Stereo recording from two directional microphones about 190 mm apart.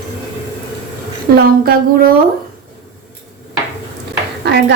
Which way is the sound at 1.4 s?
50° right (ahead or behind).